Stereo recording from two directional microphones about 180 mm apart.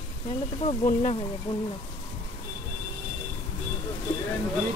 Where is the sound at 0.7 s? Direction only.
40° left (ahead or behind).